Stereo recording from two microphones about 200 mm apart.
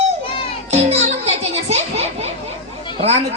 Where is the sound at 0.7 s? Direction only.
35° right (ahead or behind).